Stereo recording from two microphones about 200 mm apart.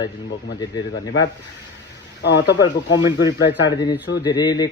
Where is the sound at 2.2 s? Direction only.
60° left (ahead or behind).